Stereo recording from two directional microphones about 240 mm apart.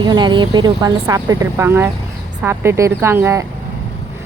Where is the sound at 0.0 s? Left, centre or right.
Centre.